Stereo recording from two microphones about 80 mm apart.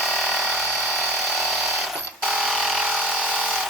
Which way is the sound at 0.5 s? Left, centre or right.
Centre.